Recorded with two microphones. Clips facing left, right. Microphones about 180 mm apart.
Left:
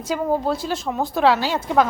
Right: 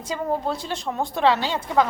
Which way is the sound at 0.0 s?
5° left (ahead or behind).